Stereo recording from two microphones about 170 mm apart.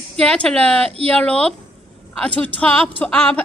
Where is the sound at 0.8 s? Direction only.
35° right (ahead or behind).